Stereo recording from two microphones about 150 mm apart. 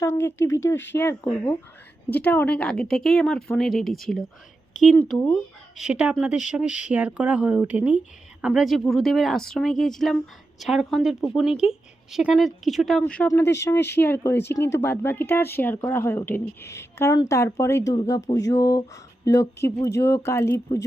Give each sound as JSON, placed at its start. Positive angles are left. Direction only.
{"t": 0.0, "sound": "a woman's voice", "side_deg": 15}
{"t": 5.7, "sound": "a woman's voice", "side_deg": -5}